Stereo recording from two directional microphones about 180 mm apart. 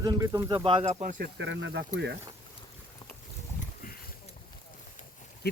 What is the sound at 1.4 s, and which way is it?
Speech, 80° right.